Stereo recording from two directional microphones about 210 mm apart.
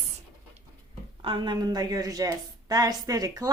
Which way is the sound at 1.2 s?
25° right (ahead or behind).